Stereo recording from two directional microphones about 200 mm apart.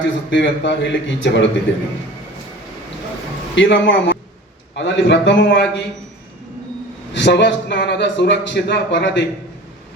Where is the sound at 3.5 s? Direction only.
65° left (ahead or behind).